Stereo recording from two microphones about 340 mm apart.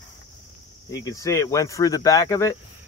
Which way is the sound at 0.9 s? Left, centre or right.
Centre.